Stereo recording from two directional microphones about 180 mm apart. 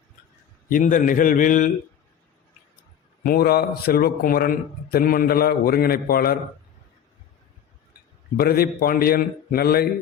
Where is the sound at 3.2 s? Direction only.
60° left (ahead or behind).